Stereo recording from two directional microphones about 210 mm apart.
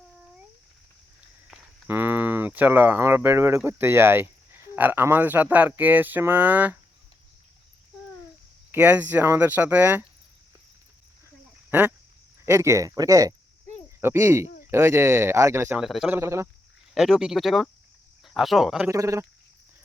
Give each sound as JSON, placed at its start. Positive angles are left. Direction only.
{"t": 1.5, "sound": "speech", "side_deg": -10}
{"t": 8.7, "sound": "speech", "side_deg": -10}
{"t": 11.7, "sound": "speech", "side_deg": -10}
{"t": 14.4, "sound": "a sound", "side_deg": 40}
{"t": 14.7, "sound": "speech", "side_deg": -10}
{"t": 16.9, "sound": "speech", "side_deg": 0}
{"t": 18.9, "sound": "speech", "side_deg": -15}